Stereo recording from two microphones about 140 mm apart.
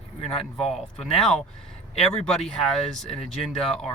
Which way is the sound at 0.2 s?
45° left (ahead or behind).